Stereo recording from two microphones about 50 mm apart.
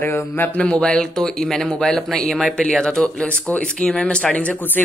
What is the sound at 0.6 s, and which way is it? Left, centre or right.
Speech, left.